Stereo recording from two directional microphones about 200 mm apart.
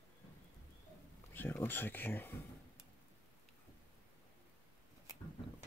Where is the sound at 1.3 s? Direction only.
10° left (ahead or behind).